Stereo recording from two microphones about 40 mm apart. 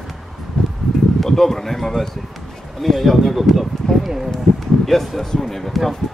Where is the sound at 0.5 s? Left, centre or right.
Left.